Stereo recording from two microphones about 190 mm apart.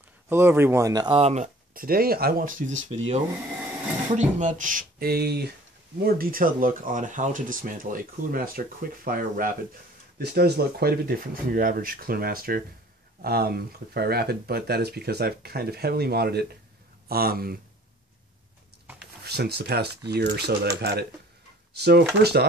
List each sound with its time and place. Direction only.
0.3 s speech: 10° right (ahead or behind); by 2.8 s 45° right (ahead or behind)
2.9 s speech: 30° right (ahead or behind)
4.1 s speech: 40° right (ahead or behind)
19.2 s speech: 55° right (ahead or behind)